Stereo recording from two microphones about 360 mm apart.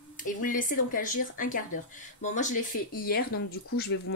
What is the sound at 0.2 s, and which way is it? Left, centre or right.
Speech, left.